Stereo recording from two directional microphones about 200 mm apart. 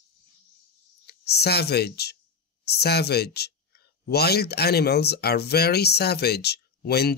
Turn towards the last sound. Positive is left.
turn(degrees=55)  # may be behind; listen again after turning